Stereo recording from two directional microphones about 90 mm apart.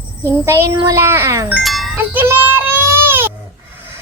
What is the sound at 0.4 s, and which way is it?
Speech, 30° right (ahead or behind).